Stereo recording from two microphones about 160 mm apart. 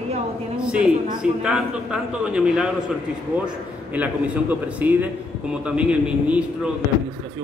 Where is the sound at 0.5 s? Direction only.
5° right (ahead or behind).